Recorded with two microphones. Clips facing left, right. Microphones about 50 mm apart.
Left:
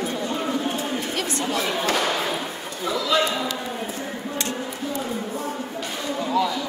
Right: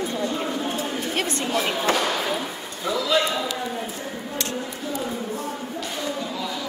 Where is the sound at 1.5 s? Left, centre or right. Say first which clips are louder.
Right 2 dB; right.